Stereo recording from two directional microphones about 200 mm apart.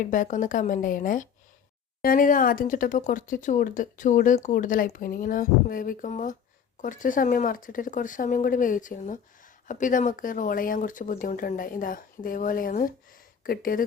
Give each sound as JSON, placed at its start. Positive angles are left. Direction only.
{"t": 0.0, "sound": "speech", "side_deg": 40}